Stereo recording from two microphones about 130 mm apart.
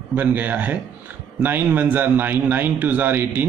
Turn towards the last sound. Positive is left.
turn(degrees=-15)  # may be behind; listen again after turning